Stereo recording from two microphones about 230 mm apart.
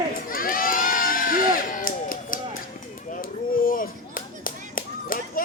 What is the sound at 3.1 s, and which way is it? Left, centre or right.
Clapping, left.